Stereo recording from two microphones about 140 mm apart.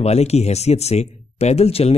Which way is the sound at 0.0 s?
50° left (ahead or behind).